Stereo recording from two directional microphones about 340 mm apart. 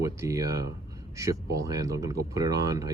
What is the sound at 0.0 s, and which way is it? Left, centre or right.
Speech, centre.